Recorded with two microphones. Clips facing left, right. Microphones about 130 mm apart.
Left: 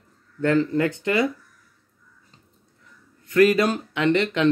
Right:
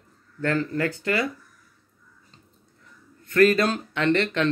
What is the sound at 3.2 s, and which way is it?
Speech, 15° left (ahead or behind).